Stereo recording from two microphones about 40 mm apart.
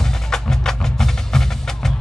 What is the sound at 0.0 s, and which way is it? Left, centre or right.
Music, centre.